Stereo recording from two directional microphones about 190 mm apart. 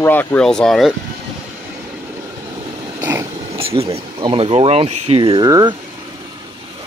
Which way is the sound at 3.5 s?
30° right (ahead or behind).